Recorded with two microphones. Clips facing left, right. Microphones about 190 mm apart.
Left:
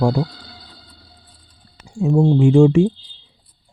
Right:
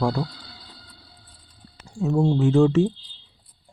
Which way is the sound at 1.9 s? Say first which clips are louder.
Left 5 dB; 15° left (ahead or behind).